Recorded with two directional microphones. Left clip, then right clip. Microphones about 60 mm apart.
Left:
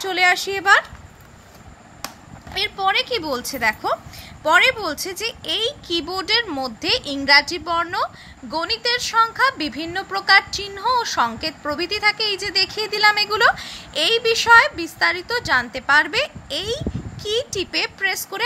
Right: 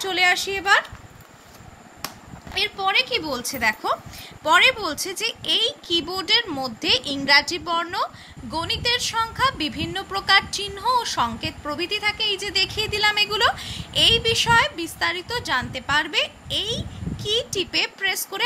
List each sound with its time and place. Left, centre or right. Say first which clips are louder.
0.0 s speech: left 2 dB; left
0.3 s speech: left 5 dB; left
2.6 s speech: even; left
3.5 s a woman's voice: left 1 dB; left
12.5 s a woman's voice: left 3 dB; left